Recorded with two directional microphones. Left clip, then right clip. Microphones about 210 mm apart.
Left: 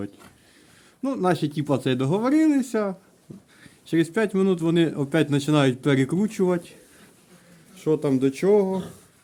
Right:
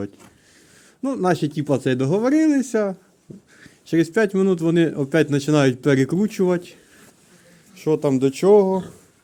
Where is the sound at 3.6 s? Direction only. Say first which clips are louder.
Right 3 dB; 10° right (ahead or behind).